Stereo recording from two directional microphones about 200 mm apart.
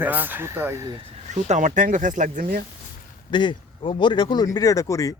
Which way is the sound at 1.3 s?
35° right (ahead or behind).